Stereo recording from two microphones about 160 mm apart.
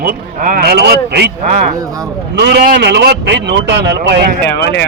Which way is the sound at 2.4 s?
85° right.